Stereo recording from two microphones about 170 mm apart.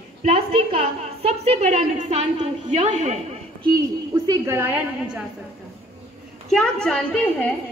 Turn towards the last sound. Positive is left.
turn(degrees=5)  # may be behind; listen again after turning